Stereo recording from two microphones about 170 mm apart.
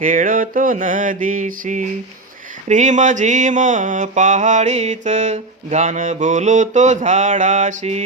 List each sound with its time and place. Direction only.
0.0 s mantra: 50° right (ahead or behind)